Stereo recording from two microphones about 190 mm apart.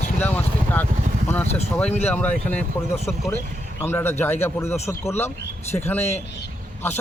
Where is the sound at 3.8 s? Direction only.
10° left (ahead or behind).